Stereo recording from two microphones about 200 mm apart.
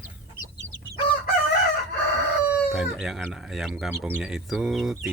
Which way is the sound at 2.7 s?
Centre (ahead or behind).